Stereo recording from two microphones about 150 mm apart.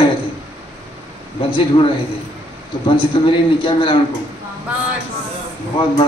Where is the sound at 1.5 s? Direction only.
35° left (ahead or behind).